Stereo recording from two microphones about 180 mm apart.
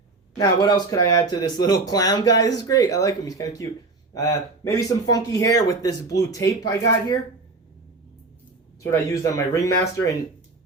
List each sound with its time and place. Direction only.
0.3 s speech: 20° left (ahead or behind)
8.8 s speech: 15° left (ahead or behind)